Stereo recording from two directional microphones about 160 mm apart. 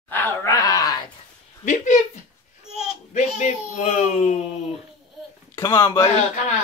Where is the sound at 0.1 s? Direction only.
10° left (ahead or behind).